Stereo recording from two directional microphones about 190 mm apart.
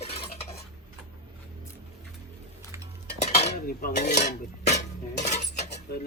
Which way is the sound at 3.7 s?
50° left (ahead or behind).